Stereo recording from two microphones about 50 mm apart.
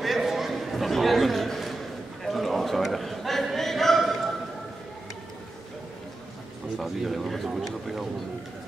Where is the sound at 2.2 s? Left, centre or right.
Centre.